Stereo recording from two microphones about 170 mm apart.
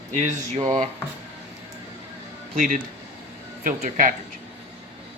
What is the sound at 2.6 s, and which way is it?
Speech, 50° right (ahead or behind).